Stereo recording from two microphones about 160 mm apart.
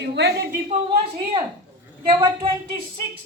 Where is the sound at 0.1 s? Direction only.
90° right.